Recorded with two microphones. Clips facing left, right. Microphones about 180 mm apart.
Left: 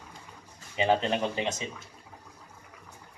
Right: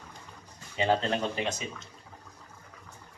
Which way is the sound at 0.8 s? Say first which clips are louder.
Left 1 dB; 15° left (ahead or behind).